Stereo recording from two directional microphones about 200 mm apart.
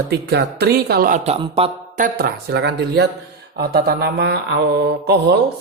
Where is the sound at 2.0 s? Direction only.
50° right (ahead or behind).